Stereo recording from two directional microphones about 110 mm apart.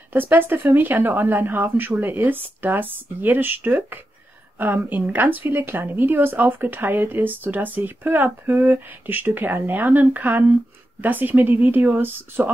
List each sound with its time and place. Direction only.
0.1 s a woman's voice: 20° right (ahead or behind)